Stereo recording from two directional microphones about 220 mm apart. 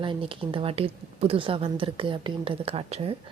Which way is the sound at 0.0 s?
25° right (ahead or behind).